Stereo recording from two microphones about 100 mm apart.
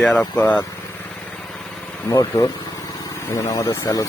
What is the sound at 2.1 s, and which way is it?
Speech, 35° left (ahead or behind).